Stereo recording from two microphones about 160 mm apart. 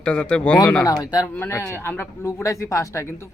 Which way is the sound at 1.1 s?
15° left (ahead or behind).